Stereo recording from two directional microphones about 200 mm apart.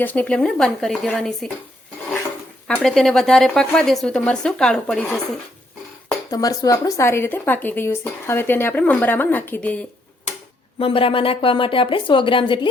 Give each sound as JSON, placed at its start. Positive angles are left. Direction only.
{"t": 0.0, "sound": "a woman's voice", "side_deg": 10}
{"t": 2.6, "sound": "a woman's voice", "side_deg": 5}
{"t": 6.3, "sound": "a woman's voice", "side_deg": 20}
{"t": 10.8, "sound": "a woman's voice", "side_deg": 30}